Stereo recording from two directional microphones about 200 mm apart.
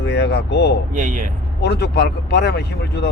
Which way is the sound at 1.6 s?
55° left (ahead or behind).